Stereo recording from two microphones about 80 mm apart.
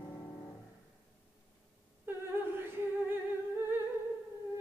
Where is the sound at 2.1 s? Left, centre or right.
Right.